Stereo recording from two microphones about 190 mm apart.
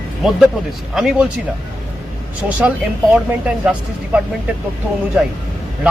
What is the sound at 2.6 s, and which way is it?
Speech, 5° right (ahead or behind).